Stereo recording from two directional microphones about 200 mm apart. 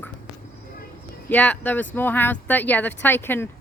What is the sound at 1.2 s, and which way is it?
A woman's voice, 10° left (ahead or behind).